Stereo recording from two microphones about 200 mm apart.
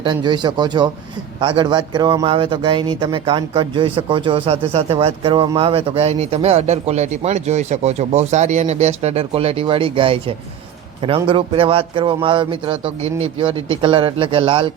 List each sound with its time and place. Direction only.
0.0 s a man's voice: 20° right (ahead or behind)